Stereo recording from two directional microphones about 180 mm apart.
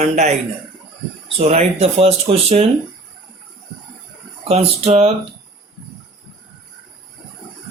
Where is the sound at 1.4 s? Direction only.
35° right (ahead or behind).